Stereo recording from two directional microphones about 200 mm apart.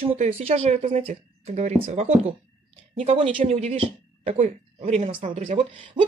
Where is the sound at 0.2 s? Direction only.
35° right (ahead or behind).